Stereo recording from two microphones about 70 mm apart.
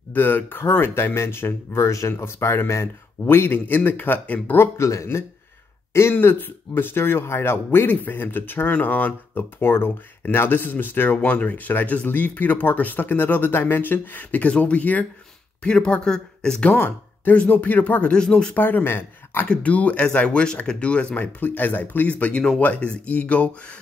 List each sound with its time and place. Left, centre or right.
0.1 s speech: left
4.7 s speech: left
6.1 s speech: left; by 16.7 s centre
16.7 s speech: left; by 18.5 s centre
18.5 s speech: left
19.4 s speech: centre
21.2 s speech: left
22.2 s speech: centre